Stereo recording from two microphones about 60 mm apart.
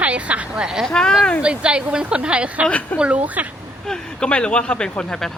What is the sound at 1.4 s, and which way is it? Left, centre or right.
Speech, centre.